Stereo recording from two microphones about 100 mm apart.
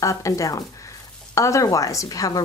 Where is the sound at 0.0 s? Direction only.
30° left (ahead or behind).